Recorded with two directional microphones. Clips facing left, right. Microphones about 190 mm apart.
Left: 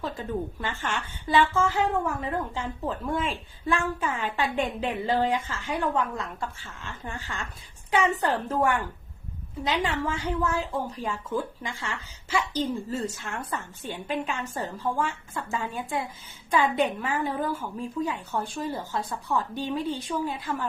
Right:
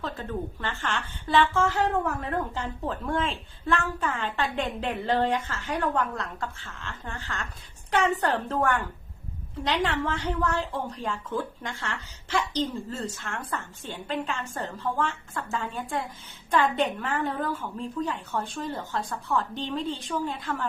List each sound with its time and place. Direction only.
0.0 s a woman's voice: 10° left (ahead or behind)